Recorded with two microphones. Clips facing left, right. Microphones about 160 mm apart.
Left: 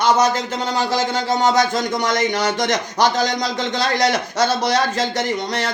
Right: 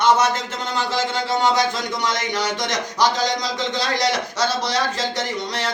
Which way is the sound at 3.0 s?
55° left (ahead or behind).